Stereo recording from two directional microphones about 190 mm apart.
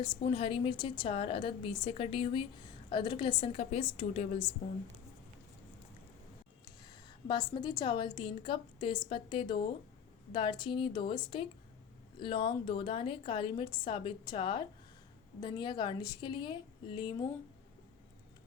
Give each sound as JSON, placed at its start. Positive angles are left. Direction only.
{"t": 0.0, "sound": "a woman's voice", "side_deg": 30}
{"t": 6.8, "sound": "a woman's voice", "side_deg": 25}